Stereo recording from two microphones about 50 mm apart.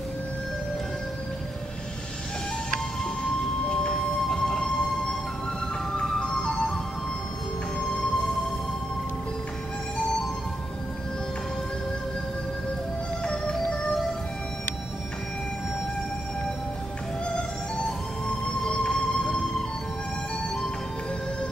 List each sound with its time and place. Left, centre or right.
3.6 s music: centre
5.9 s music: centre
13.2 s music: centre
17.8 s music: centre